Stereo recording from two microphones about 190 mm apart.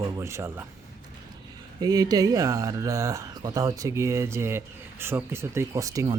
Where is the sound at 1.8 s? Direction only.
20° right (ahead or behind).